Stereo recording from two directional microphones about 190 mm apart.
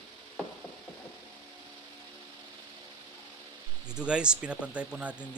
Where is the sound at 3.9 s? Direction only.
5° right (ahead or behind).